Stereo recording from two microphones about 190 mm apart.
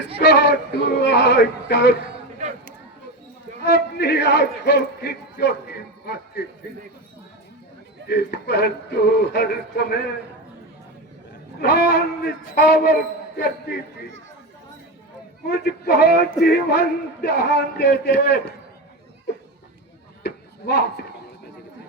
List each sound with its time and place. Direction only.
0.3 s a man's voice: 60° left (ahead or behind)
2.4 s chatter: 40° right (ahead or behind)
3.6 s a man's voice: 65° left (ahead or behind)
8.0 s a man's voice: 65° left (ahead or behind)
11.6 s a man's voice: 60° left (ahead or behind)
15.4 s a man's voice: 65° left (ahead or behind)
20.2 s a sound: 60° left (ahead or behind)